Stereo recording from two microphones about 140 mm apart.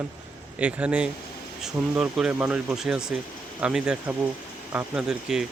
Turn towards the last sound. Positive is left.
turn(degrees=-5)  # may be behind; listen again after turning